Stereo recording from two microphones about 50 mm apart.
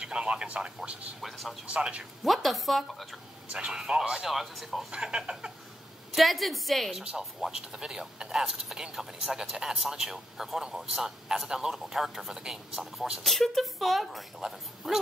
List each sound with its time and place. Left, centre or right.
0.0 s a man's voice: right
1.2 s speech: centre
1.7 s speech: right
2.2 s speech: centre
3.5 s a man's voice: centre
4.3 s speech: centre
4.9 s speech: centre
6.1 s speech: centre
7.0 s a man's voice: centre
13.2 s a man's voice: centre